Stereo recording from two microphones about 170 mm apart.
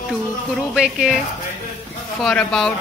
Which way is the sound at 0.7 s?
Centre (ahead or behind).